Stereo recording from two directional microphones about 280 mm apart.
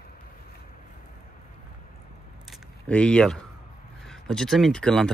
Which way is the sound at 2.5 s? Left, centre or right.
Centre.